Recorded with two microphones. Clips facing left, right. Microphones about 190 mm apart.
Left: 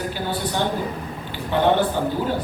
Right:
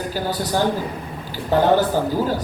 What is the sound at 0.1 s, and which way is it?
A man's voice, 40° right (ahead or behind).